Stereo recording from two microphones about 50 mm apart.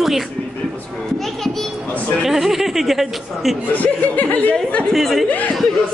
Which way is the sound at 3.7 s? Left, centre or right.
Left.